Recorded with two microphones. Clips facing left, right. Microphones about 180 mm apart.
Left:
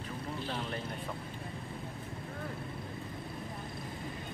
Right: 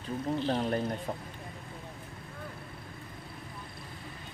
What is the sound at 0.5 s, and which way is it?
Speech, 40° right (ahead or behind).